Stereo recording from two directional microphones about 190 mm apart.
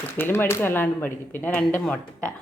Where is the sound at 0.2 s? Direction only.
10° left (ahead or behind).